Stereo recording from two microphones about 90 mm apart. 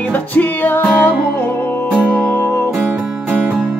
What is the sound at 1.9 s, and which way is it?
Music, 10° left (ahead or behind).